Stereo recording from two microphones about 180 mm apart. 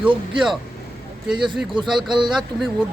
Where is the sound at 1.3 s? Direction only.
25° right (ahead or behind).